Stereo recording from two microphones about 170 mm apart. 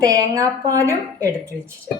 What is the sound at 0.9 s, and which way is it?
Speech, 10° left (ahead or behind).